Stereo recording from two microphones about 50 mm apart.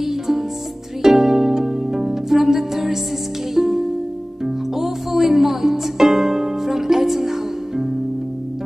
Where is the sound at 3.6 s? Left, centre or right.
Centre.